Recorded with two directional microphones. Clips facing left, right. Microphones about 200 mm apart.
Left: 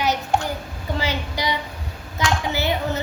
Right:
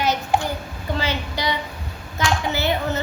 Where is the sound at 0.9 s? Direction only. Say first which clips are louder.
Even; 15° left (ahead or behind).